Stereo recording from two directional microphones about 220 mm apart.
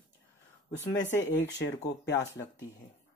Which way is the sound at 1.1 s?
55° left (ahead or behind).